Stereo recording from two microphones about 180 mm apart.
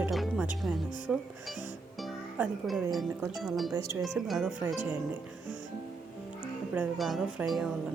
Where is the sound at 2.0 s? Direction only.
Centre (ahead or behind).